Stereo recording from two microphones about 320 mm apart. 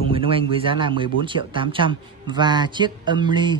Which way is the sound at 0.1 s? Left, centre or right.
Centre.